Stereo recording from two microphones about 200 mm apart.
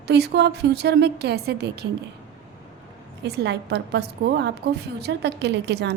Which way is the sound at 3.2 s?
55° right (ahead or behind).